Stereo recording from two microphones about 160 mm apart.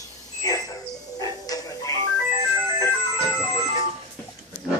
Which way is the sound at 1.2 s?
20° left (ahead or behind).